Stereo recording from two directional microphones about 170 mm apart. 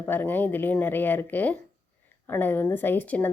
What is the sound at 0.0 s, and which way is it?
Speech, 10° left (ahead or behind).